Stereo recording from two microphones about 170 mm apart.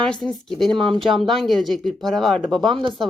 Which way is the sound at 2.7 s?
30° right (ahead or behind).